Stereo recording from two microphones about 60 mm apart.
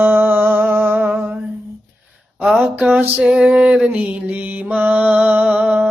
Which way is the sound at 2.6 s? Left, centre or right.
Right.